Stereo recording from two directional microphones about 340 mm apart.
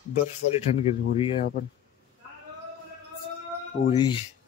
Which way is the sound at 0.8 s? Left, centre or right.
Centre.